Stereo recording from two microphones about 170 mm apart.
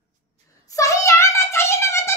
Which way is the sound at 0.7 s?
20° left (ahead or behind).